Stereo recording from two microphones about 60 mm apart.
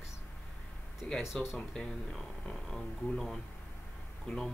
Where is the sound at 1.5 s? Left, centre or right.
Centre.